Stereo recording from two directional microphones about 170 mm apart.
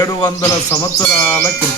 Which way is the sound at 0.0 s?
20° left (ahead or behind).